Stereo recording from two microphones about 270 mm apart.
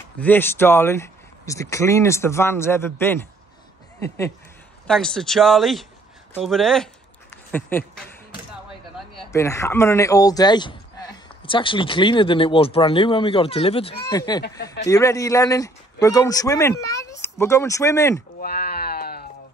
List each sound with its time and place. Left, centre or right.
0.2 s a man's voice: centre
4.8 s speech: centre
9.3 s a man's voice: centre
18.4 s sheep: left